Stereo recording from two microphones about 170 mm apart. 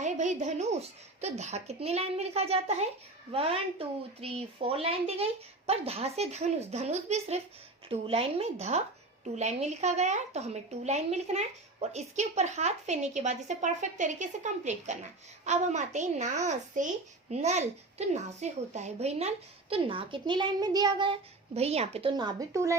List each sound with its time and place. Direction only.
0.0 s speech: 45° right (ahead or behind)
22.1 s speech: 25° right (ahead or behind)